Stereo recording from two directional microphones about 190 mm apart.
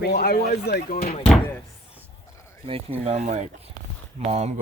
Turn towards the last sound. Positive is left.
turn(degrees=-35)  # may be behind; listen again after turning